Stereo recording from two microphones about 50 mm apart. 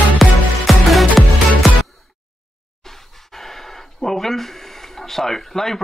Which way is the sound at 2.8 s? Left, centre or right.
Centre.